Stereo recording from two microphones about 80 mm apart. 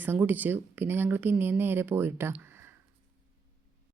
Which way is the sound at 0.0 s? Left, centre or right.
Right.